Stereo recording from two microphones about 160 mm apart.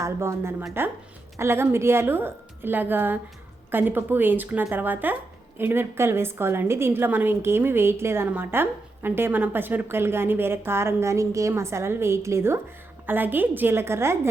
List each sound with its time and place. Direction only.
0.0 s a woman's voice: 15° right (ahead or behind)